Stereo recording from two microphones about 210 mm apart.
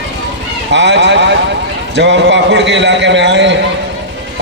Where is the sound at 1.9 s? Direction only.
60° right (ahead or behind).